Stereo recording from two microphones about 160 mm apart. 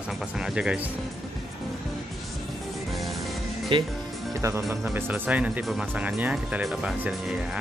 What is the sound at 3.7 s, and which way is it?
Speech, 30° right (ahead or behind).